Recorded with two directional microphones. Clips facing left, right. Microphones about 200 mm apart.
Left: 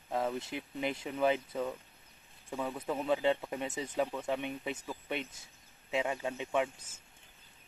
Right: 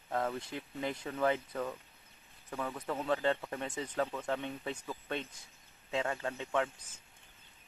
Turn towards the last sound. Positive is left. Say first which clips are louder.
# left 1 dB
turn(degrees=25)  # may be behind; listen again after turning